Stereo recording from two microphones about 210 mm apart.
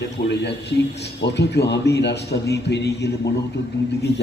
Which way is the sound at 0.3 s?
55° left (ahead or behind).